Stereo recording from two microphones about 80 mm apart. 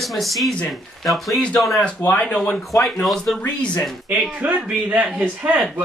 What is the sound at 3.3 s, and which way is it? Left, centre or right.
Speech, centre.